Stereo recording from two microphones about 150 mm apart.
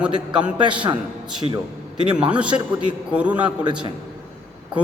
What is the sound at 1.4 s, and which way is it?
Speech, 30° right (ahead or behind).